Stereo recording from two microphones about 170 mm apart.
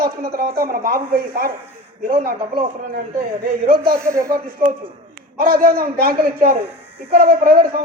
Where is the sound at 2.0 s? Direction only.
55° right (ahead or behind).